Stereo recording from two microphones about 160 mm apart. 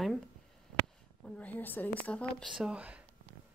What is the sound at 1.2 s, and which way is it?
A woman's voice, 10° left (ahead or behind).